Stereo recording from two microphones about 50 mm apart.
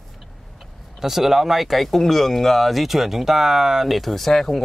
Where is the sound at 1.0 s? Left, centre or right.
Centre.